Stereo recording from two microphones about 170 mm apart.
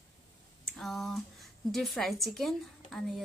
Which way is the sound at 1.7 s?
Centre (ahead or behind).